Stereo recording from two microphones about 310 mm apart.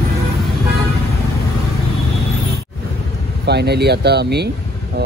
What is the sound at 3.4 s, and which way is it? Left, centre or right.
Speech, right.